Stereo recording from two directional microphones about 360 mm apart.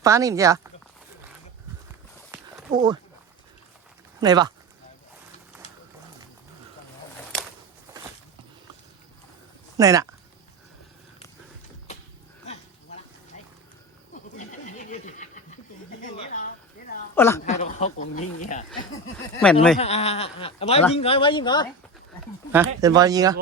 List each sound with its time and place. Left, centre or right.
0.0 s speech: centre
2.3 s a sound: centre
4.2 s speech: centre
9.7 s speech: centre
14.1 s neigh: left
17.2 s speech: centre
17.4 s speech: centre
19.1 s speech: centre
19.8 s speech: centre
22.5 s speech: centre